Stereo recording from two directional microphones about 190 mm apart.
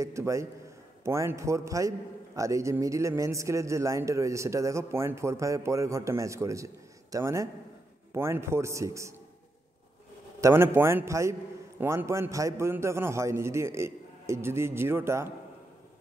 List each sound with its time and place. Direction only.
0.0 s a man's voice: 15° right (ahead or behind)
10.4 s a man's voice: 10° right (ahead or behind)